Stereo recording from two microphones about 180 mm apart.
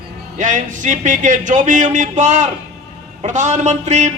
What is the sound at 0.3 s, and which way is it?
A man's voice, 45° right (ahead or behind).